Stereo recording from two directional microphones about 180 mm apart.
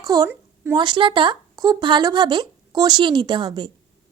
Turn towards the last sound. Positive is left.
turn(degrees=-25)  # may be behind; listen again after turning